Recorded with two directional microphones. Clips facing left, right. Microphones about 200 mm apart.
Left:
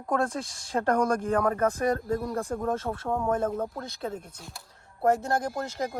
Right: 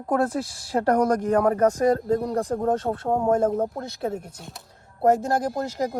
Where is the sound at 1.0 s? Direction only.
30° right (ahead or behind).